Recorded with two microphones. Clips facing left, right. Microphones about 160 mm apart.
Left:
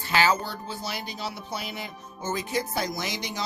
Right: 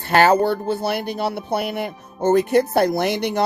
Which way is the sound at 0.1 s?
60° right (ahead or behind).